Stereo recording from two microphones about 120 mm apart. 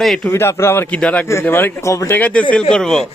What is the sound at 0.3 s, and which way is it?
Speech, 20° left (ahead or behind).